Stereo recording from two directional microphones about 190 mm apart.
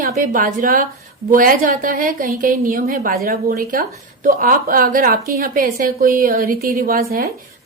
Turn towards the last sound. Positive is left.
turn(degrees=-50)  # may be behind; listen again after turning